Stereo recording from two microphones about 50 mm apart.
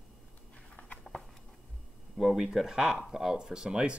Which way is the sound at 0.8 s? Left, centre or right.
Left.